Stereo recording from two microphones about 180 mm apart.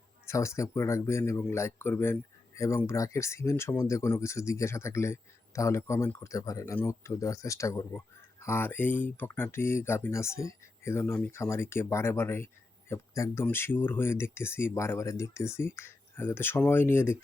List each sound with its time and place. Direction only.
0.3 s speech: 15° left (ahead or behind)